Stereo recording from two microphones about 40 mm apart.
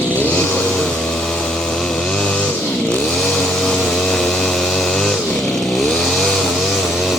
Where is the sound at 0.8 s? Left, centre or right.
Centre.